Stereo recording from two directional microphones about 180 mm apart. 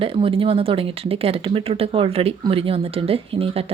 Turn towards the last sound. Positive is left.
turn(degrees=-30)  # may be behind; listen again after turning